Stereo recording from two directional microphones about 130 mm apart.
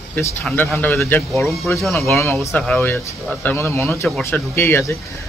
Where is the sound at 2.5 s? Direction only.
5° left (ahead or behind).